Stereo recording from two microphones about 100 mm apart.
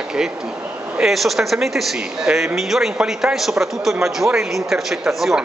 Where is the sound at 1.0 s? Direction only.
Centre (ahead or behind).